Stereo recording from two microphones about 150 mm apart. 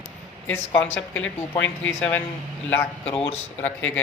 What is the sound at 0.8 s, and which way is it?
Speech, 10° left (ahead or behind).